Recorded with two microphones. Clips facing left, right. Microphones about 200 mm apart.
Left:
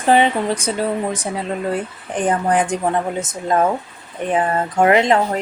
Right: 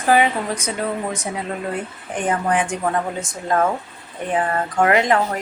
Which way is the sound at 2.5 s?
35° left (ahead or behind).